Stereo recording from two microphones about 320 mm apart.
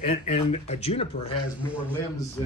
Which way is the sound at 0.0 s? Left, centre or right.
Centre.